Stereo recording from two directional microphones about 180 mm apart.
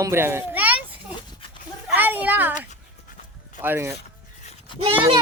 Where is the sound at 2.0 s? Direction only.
10° right (ahead or behind).